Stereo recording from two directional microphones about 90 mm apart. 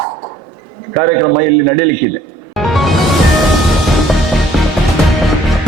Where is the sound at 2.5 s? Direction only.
Centre (ahead or behind).